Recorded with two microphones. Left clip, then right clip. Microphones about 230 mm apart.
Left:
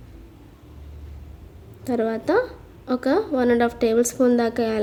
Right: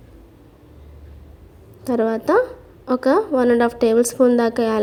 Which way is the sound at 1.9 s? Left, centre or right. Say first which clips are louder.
Right 4 dB; centre.